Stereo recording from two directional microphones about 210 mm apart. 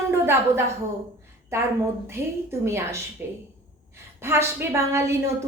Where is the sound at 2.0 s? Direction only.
10° right (ahead or behind).